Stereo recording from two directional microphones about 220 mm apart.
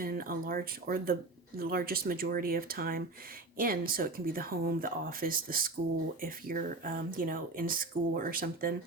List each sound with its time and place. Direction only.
0.0 s speech: 40° right (ahead or behind)